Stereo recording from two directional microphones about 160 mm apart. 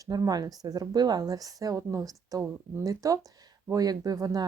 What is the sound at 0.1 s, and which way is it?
Speech, 25° right (ahead or behind).